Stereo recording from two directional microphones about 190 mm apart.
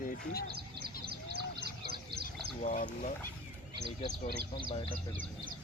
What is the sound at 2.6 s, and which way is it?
Speech, 45° left (ahead or behind).